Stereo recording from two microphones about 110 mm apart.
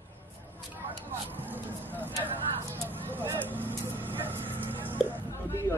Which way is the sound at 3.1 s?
20° right (ahead or behind).